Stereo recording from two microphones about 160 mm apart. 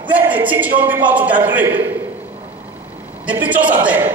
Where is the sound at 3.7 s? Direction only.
15° right (ahead or behind).